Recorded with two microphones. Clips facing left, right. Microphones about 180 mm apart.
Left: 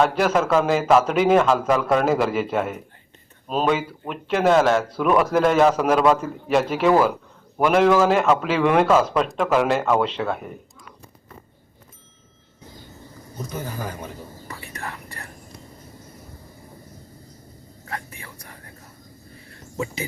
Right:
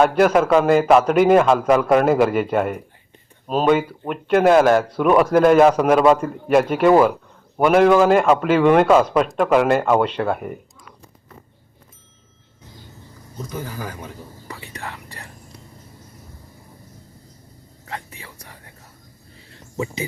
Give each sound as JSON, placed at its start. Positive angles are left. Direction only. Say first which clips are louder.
{"t": 0.0, "sound": "a man's voice", "louder": "right 4 dB", "side_deg": 0}
{"t": 14.4, "sound": "whispering", "louder": "right 2 dB", "side_deg": -15}
{"t": 19.7, "sound": "speech", "louder": "right 2 dB", "side_deg": -20}